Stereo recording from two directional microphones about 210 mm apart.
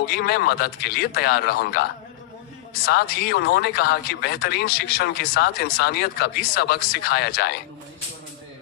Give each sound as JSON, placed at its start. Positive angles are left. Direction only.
{"t": 0.0, "sound": "speech", "side_deg": 50}
{"t": 2.9, "sound": "speech", "side_deg": 50}